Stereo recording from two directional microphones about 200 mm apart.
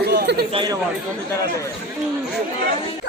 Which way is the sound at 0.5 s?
20° right (ahead or behind).